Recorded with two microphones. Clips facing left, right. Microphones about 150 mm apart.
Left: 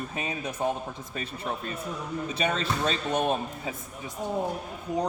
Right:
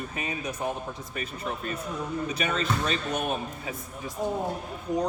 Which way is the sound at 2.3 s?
30° left (ahead or behind).